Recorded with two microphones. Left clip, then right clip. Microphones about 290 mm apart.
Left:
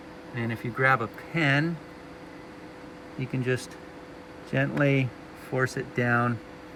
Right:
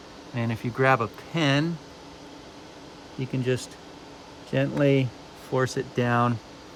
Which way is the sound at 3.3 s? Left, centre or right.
Right.